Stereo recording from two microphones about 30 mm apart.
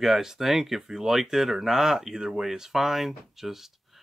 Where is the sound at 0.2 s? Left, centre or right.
Centre.